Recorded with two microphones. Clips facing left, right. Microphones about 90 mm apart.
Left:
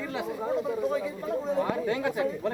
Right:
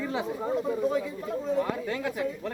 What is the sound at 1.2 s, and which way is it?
Speech, 15° left (ahead or behind).